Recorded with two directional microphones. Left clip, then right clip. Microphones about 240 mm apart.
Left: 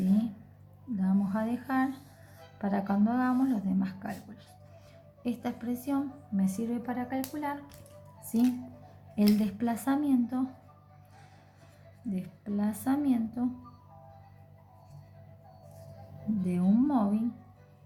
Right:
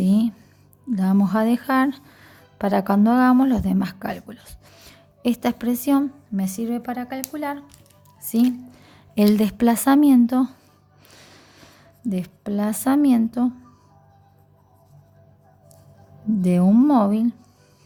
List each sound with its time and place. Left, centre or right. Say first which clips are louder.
0.0 s a sound: right 9 dB; right
0.9 s a woman's voice: right 11 dB; right
9.1 s a woman's voice: right 10 dB; right
12.1 s a woman's voice: right 9 dB; right
16.4 s a woman's voice: right 11 dB; right